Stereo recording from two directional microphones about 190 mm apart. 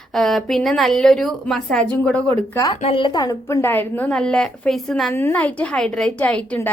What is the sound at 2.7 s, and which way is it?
A woman's voice, 30° left (ahead or behind).